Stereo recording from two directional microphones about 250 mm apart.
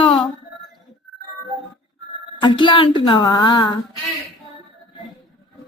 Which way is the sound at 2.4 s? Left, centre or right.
Centre.